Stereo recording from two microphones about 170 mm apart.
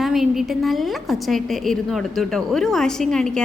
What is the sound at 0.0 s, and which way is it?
A woman's voice, centre (ahead or behind).